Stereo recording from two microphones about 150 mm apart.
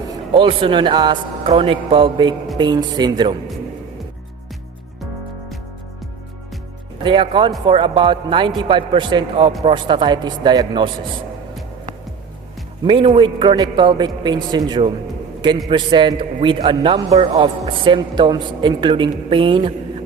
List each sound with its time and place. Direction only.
0.3 s a woman's voice: 35° right (ahead or behind)
7.0 s a woman's voice: 35° right (ahead or behind)
12.8 s a woman's voice: 35° right (ahead or behind)